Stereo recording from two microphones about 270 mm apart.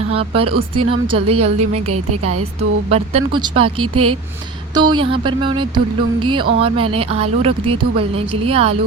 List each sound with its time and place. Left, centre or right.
0.1 s speech: right
0.4 s a woman's voice: right
0.9 s a woman's voice: centre
1.7 s a woman's voice: right
2.6 s a woman's voice: right
3.8 s a woman's voice: right
4.7 s a woman's voice: centre